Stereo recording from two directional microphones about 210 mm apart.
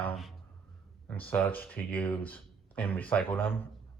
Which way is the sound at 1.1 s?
5° left (ahead or behind).